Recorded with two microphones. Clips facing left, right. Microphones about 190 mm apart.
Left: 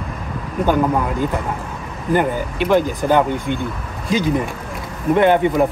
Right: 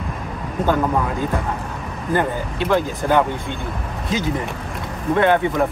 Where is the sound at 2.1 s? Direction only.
15° left (ahead or behind).